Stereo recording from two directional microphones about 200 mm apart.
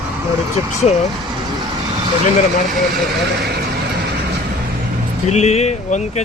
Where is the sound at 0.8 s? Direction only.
35° left (ahead or behind).